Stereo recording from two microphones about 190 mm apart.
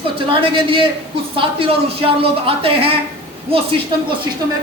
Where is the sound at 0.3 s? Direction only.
25° right (ahead or behind).